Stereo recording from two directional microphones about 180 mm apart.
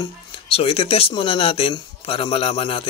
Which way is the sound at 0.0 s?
30° left (ahead or behind).